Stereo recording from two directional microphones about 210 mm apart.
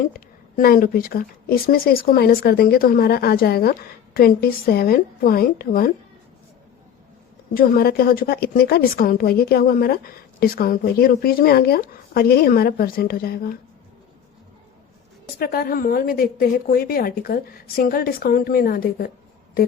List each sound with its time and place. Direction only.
0.0 s a woman's voice: 45° left (ahead or behind)
7.5 s a woman's voice: 45° left (ahead or behind)
15.4 s a woman's voice: 45° left (ahead or behind)